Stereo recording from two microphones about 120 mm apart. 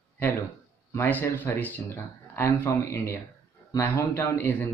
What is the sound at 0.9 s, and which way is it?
Speech, 20° left (ahead or behind).